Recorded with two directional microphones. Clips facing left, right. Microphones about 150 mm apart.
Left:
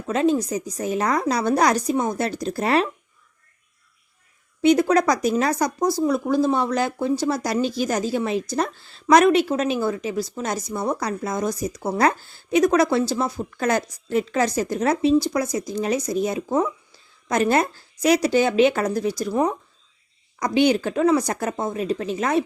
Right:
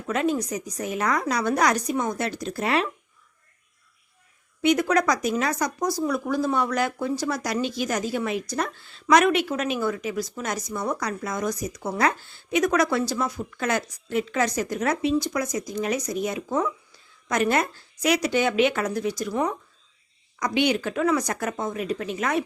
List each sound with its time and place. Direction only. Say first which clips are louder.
0.1 s speech: left 4 dB; 30° left (ahead or behind)
4.6 s speech: left 4 dB; 30° left (ahead or behind)